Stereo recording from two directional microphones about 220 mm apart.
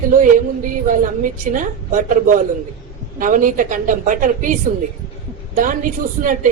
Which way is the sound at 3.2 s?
35° right (ahead or behind).